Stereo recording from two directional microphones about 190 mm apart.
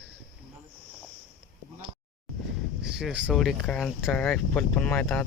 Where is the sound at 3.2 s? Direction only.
Centre (ahead or behind).